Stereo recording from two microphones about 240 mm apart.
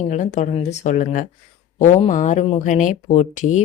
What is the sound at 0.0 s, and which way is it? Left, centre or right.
Speech, left.